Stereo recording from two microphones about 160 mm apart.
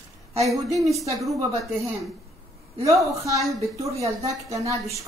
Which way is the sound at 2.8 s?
20° right (ahead or behind).